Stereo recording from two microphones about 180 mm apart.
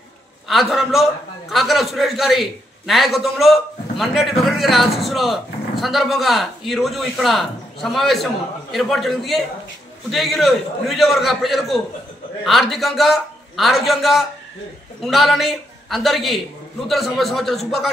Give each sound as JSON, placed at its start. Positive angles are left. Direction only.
{"t": 0.5, "sound": "a man's voice", "side_deg": 0}